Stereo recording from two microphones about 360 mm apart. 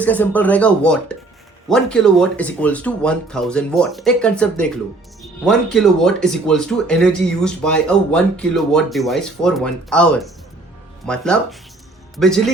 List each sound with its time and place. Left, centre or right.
0.0 s a man's voice: centre